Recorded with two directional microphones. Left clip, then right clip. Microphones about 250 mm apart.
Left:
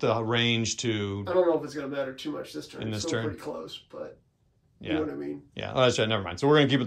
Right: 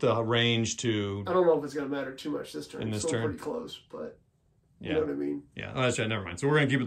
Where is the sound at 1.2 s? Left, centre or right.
Centre.